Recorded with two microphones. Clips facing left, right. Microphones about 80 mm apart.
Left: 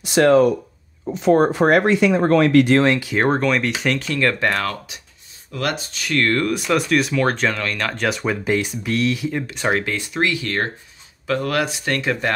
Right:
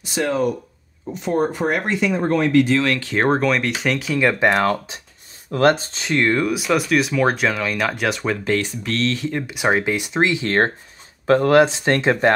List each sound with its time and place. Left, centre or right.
0.0 s speech: left
3.0 s speech: centre
4.2 s speech: centre
4.6 s speech: right; by 8.4 s centre
8.5 s speech: centre
9.5 s speech: centre; by 12.4 s right